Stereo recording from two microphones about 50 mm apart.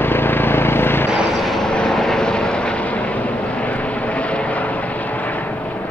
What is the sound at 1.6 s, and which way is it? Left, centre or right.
Vehicle, centre.